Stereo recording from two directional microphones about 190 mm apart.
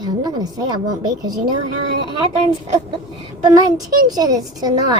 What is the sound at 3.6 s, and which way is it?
A child's voice, 20° right (ahead or behind).